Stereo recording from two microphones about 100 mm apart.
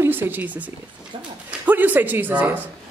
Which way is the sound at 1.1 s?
65° right (ahead or behind).